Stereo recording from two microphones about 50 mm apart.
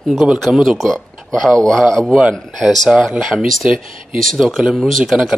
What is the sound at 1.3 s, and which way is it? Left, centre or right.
Speech, centre.